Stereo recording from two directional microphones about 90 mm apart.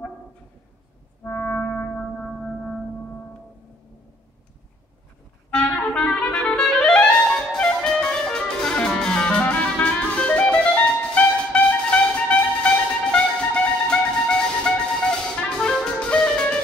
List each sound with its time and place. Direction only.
1.2 s music: 20° left (ahead or behind)
5.5 s clarinet: 10° left (ahead or behind)